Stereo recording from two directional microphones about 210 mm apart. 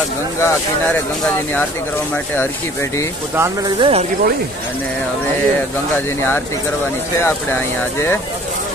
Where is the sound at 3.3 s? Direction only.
10° right (ahead or behind).